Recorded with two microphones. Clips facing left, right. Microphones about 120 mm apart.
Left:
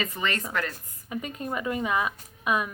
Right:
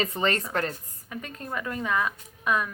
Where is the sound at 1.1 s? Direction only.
15° left (ahead or behind).